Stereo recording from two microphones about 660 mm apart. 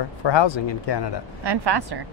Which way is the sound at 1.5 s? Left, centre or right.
Right.